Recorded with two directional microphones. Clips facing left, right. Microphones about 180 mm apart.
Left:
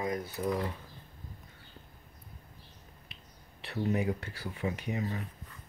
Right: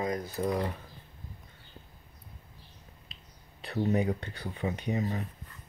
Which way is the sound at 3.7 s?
30° right (ahead or behind).